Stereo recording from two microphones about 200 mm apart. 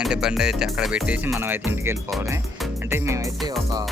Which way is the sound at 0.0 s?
5° right (ahead or behind).